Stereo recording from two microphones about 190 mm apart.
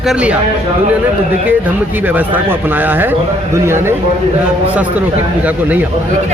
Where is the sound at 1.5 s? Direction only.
10° right (ahead or behind).